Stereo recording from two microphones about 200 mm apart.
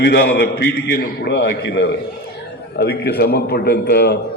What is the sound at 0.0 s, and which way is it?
A man's voice, 55° left (ahead or behind).